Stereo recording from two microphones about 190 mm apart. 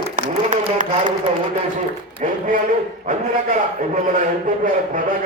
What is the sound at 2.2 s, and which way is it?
Speech, 40° right (ahead or behind).